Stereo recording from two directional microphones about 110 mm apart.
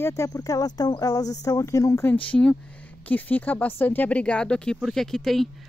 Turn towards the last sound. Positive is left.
turn(degrees=0)  # may be behind; listen again after turning